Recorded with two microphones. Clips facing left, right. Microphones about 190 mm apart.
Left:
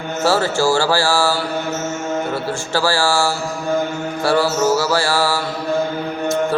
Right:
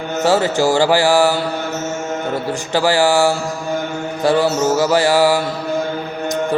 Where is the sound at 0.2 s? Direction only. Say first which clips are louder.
Right 2 dB; 15° right (ahead or behind).